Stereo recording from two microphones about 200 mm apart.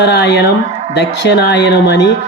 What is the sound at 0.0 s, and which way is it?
A woman's voice, 60° left (ahead or behind).